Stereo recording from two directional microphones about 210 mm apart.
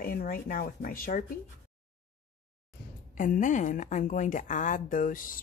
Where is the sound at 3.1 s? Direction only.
40° left (ahead or behind).